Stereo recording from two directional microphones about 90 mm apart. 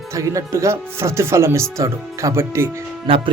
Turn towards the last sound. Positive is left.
turn(degrees=-75)  # may be behind; listen again after turning